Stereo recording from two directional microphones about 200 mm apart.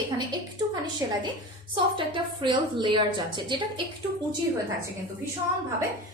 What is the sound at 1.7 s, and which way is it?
A woman's voice, 25° right (ahead or behind).